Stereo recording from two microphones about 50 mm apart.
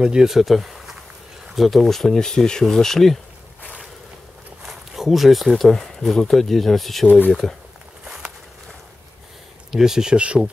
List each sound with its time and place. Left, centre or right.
0.0 s speech: centre
4.6 s speech: centre
8.0 s walk: centre
9.7 s speech: centre